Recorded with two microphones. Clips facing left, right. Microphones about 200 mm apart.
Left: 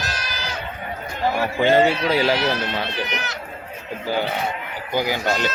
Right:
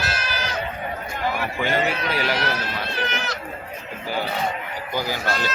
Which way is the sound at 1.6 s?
25° left (ahead or behind).